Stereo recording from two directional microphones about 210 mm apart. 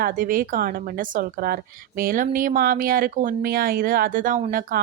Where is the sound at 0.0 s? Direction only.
40° right (ahead or behind).